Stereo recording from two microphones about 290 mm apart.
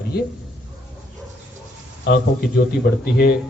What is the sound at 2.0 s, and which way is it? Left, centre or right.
A man's voice, left.